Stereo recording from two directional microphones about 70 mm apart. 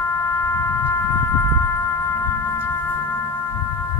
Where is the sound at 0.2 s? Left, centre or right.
Left.